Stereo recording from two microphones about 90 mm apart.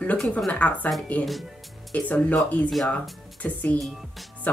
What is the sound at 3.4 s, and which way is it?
A woman's voice, 15° left (ahead or behind).